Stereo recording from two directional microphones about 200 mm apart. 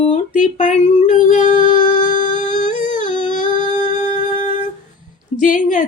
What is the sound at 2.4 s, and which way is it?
Humming, 40° left (ahead or behind).